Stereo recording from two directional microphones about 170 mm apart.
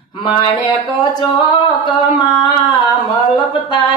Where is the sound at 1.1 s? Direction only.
25° left (ahead or behind).